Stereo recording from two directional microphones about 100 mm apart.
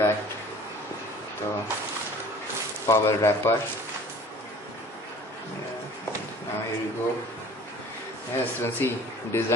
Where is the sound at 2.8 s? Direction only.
30° left (ahead or behind).